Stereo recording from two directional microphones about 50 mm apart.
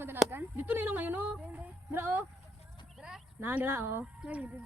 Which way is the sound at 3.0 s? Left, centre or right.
Right.